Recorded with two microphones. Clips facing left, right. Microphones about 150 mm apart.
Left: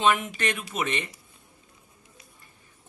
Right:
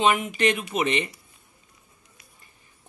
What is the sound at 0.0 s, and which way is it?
Speech, 15° right (ahead or behind).